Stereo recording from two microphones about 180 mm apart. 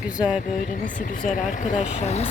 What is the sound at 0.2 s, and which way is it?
Speech, 5° right (ahead or behind).